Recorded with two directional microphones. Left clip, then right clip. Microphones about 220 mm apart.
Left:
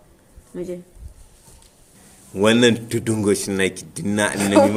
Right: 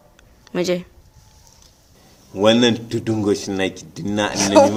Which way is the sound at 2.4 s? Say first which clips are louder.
Right 1 dB; 25° left (ahead or behind).